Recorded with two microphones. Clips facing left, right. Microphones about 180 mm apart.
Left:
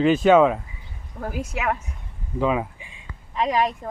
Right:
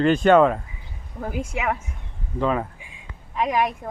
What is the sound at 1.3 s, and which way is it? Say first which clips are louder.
Speech: right 2 dB; 25° right (ahead or behind).